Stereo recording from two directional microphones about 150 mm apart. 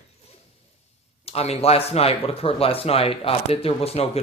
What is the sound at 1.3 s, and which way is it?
Speech, 45° left (ahead or behind).